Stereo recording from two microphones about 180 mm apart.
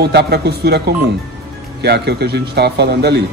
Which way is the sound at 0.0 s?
65° right (ahead or behind).